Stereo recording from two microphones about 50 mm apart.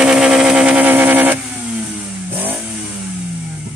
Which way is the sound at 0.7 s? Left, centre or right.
Right.